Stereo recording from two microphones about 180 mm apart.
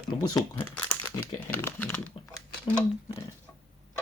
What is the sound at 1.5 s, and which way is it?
Speech, 10° left (ahead or behind).